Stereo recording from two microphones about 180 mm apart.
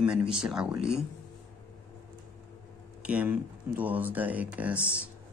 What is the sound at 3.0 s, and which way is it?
Speech, 10° right (ahead or behind).